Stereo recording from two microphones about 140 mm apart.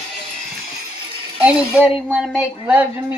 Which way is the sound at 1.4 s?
10° right (ahead or behind).